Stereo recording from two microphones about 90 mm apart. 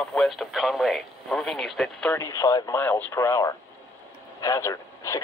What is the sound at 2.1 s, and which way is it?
Speech, 35° left (ahead or behind).